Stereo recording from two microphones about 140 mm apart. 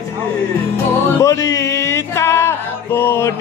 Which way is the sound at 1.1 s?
20° left (ahead or behind).